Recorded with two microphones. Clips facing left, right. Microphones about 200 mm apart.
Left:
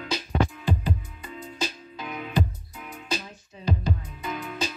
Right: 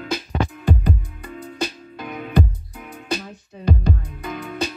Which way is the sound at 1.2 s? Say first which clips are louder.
Right 5 dB; 60° right (ahead or behind).